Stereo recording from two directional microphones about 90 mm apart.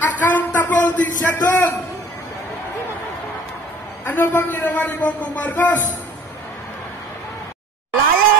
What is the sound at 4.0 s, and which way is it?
A man's voice, 25° left (ahead or behind).